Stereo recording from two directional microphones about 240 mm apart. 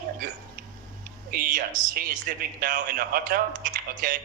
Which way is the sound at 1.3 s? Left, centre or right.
Right.